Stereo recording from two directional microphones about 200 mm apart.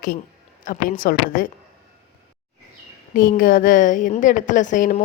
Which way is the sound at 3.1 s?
45° left (ahead or behind).